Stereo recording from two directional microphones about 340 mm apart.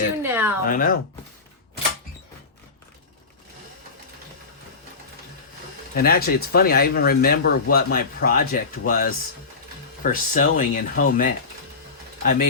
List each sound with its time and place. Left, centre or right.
0.2 s a sound: centre
0.6 s speech: left
5.9 s speech: left